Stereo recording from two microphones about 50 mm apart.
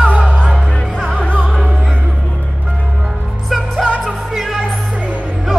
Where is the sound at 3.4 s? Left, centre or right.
Centre.